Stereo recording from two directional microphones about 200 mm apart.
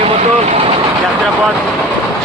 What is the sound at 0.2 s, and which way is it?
Vehicle, 35° right (ahead or behind).